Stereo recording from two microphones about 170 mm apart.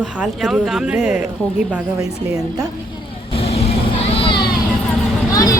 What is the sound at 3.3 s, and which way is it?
Vehicle, 35° left (ahead or behind).